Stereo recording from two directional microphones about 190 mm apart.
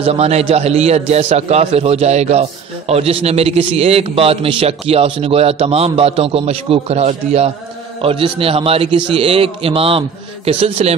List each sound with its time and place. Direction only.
0.0 s a man's voice: 35° right (ahead or behind)